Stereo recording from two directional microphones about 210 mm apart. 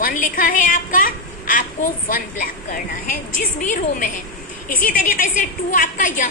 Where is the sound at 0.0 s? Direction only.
40° left (ahead or behind).